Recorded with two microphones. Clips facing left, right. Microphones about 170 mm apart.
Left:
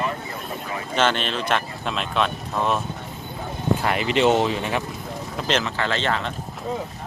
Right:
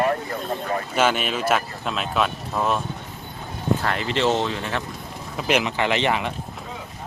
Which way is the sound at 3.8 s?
15° left (ahead or behind).